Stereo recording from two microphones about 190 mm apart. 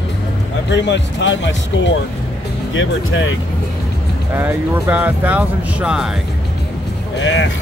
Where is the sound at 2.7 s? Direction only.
90° left.